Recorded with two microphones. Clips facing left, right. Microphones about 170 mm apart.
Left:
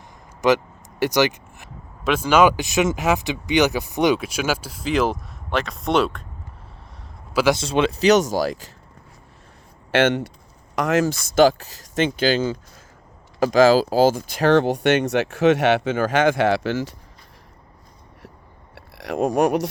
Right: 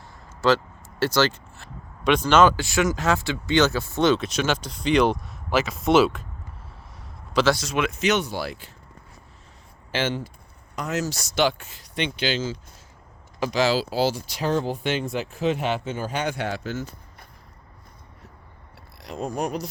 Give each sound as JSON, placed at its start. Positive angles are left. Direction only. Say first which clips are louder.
{"t": 0.4, "sound": "vehicle", "louder": "left 2 dB", "side_deg": 15}
{"t": 2.0, "sound": "speech", "louder": "left 1 dB", "side_deg": 5}
{"t": 7.5, "sound": "speech", "louder": "left 5 dB", "side_deg": 30}
{"t": 9.9, "sound": "speech", "louder": "left 8 dB", "side_deg": 75}
{"t": 10.8, "sound": "speech", "louder": "left 8 dB", "side_deg": 90}
{"t": 11.0, "sound": "speech", "louder": "left 7 dB", "side_deg": 55}
{"t": 14.4, "sound": "speech", "louder": "left 8 dB", "side_deg": 75}
{"t": 18.7, "sound": "speech", "louder": "left 9 dB", "side_deg": 85}